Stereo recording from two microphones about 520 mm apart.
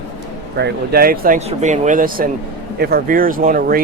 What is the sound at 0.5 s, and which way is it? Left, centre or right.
Speech, centre.